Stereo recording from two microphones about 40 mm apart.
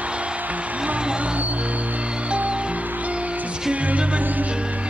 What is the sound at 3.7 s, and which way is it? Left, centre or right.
Music, right.